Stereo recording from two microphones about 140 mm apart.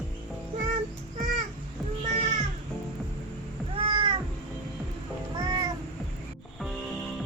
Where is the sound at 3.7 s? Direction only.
40° right (ahead or behind).